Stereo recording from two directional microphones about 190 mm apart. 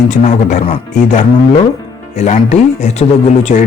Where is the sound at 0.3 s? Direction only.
40° left (ahead or behind).